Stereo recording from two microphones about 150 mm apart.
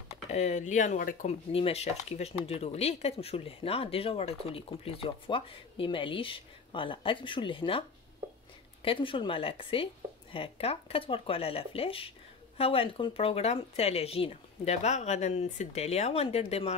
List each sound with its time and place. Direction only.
0.3 s speech: 50° left (ahead or behind)
1.5 s speech: 40° left (ahead or behind)
8.8 s speech: 35° left (ahead or behind)